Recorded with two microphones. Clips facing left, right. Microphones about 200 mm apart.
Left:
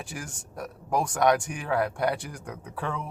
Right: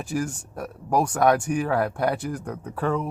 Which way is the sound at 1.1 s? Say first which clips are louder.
Right 2 dB; 40° right (ahead or behind).